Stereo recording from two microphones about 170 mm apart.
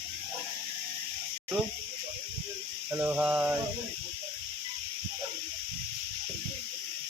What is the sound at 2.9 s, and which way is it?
Mantra, 10° right (ahead or behind).